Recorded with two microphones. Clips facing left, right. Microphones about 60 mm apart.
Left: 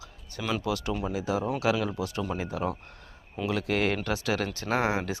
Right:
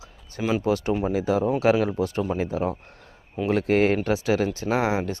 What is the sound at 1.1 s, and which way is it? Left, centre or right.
Speech, right.